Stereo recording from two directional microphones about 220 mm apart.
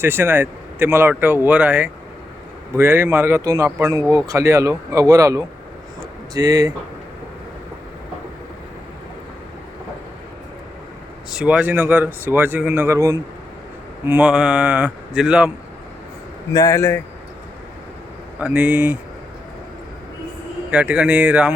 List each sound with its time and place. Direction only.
0.0 s speech: 10° right (ahead or behind)
11.3 s speech: 5° right (ahead or behind)
16.6 s a man's voice: 15° left (ahead or behind)
18.3 s speech: 5° right (ahead or behind)
20.7 s speech: 5° right (ahead or behind)